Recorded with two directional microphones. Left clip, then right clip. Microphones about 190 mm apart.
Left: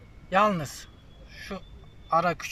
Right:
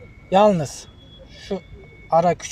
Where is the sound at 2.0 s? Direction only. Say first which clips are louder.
Right 7 dB; 20° right (ahead or behind).